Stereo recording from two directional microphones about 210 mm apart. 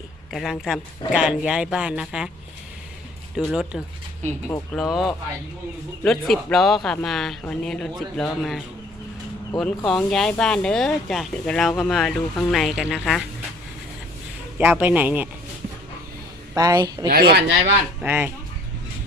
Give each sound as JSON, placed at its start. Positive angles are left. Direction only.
{"t": 0.3, "sound": "speech", "side_deg": 0}
{"t": 3.3, "sound": "speech", "side_deg": -5}
{"t": 14.6, "sound": "speech", "side_deg": -10}
{"t": 16.6, "sound": "speech", "side_deg": -15}
{"t": 17.1, "sound": "speech", "side_deg": -45}
{"t": 18.0, "sound": "speech", "side_deg": -10}